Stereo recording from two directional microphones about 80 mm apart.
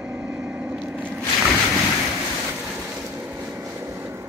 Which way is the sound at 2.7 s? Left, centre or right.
Right.